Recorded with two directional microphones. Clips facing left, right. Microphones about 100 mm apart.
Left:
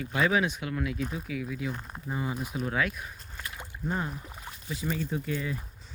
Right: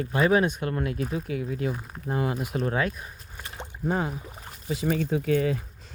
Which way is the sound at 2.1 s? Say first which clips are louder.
Right 6 dB; 65° right (ahead or behind).